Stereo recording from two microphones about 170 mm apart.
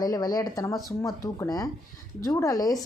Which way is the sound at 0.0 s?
25° left (ahead or behind).